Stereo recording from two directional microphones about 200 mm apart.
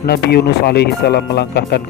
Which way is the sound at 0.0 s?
55° left (ahead or behind).